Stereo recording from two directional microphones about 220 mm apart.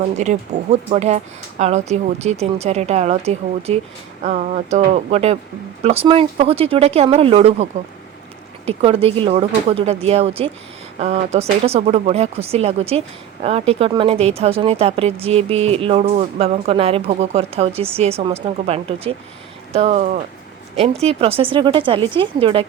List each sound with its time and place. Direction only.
0.2 s speech: 30° right (ahead or behind)